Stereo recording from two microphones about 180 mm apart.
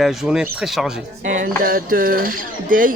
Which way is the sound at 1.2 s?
50° right (ahead or behind).